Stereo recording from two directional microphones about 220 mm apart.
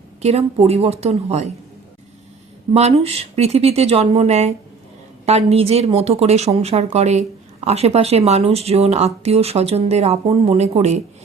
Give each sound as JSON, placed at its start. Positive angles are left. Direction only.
{"t": 0.2, "sound": "speech", "side_deg": -30}
{"t": 2.7, "sound": "speech", "side_deg": -30}